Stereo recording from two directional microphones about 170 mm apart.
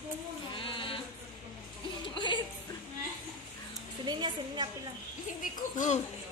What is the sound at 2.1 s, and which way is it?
Music, 30° left (ahead or behind).